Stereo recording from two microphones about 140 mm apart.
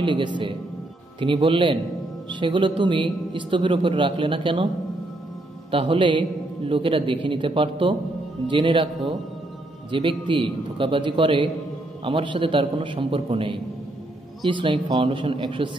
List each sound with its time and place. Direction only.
0.0 s speech: 35° right (ahead or behind)
5.7 s speech: 40° right (ahead or behind)
9.8 s speech: 35° right (ahead or behind)